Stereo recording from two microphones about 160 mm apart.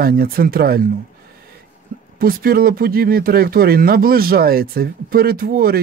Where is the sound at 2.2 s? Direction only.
65° right (ahead or behind).